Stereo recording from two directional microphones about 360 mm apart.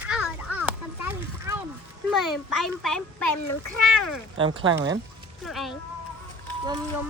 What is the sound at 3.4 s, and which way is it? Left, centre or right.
Speech, left.